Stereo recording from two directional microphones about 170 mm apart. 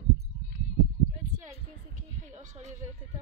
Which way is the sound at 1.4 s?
45° right (ahead or behind).